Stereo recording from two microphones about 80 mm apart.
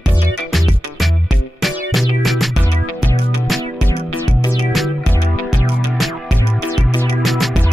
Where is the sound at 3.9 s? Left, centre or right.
Left.